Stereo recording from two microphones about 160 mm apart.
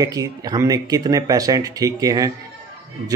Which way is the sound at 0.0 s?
25° right (ahead or behind).